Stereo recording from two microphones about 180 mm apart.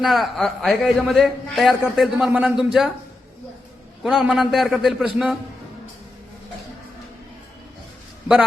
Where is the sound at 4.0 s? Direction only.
Centre (ahead or behind).